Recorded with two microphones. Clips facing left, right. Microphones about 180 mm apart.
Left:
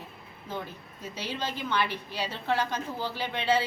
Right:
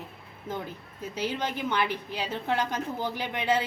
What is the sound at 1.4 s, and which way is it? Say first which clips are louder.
A woman's voice: left 1 dB; 15° right (ahead or behind).